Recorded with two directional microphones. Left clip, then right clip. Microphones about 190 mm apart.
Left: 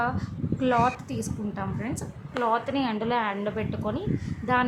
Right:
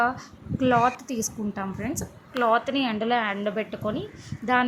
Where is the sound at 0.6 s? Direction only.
15° right (ahead or behind).